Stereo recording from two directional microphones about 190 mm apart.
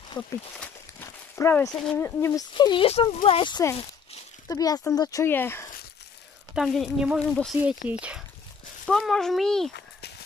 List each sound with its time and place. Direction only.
0.2 s speech: 10° left (ahead or behind)
0.6 s walk: 10° left (ahead or behind)
1.8 s speech: 10° left (ahead or behind)
2.5 s speech: 25° left (ahead or behind)
6.5 s speech: centre (ahead or behind)
8.8 s speech: centre (ahead or behind)